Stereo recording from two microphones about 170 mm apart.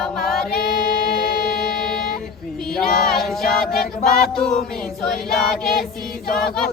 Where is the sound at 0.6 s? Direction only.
60° left (ahead or behind).